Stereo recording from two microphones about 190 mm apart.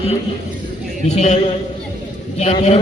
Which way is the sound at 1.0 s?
35° left (ahead or behind).